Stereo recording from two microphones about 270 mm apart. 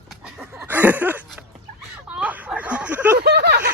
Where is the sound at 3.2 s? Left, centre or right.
Right.